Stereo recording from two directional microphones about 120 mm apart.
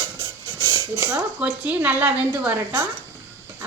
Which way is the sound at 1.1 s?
10° right (ahead or behind).